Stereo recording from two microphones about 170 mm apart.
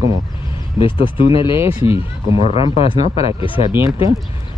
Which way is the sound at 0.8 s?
30° left (ahead or behind).